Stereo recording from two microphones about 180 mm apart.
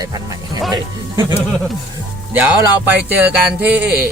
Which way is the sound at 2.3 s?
10° right (ahead or behind).